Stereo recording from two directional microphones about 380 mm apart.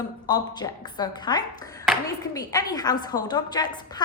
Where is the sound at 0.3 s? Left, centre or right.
Centre.